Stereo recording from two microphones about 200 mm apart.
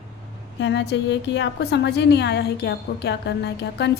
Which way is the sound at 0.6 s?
60° left (ahead or behind).